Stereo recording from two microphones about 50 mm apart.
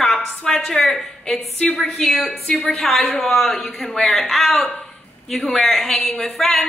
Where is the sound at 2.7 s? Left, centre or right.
Centre.